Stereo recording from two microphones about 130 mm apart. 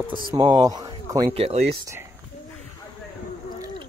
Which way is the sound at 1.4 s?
50° right (ahead or behind).